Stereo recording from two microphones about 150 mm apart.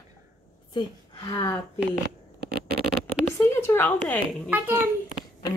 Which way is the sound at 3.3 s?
15° left (ahead or behind).